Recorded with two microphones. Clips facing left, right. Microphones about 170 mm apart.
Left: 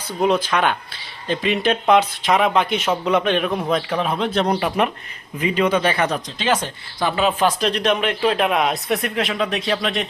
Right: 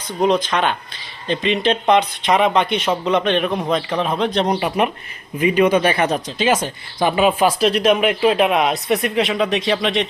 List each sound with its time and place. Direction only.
0.2 s speech: 5° left (ahead or behind)
4.4 s speech: 10° right (ahead or behind)
6.0 s speech: 30° right (ahead or behind)
6.4 s speech: 10° right (ahead or behind)